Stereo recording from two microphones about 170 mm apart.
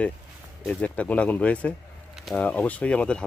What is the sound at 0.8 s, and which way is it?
Speech, 10° left (ahead or behind).